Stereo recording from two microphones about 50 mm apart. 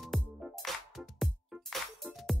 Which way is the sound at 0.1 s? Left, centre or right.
Centre.